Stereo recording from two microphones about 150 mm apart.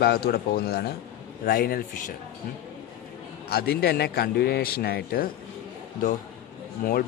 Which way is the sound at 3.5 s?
90° left.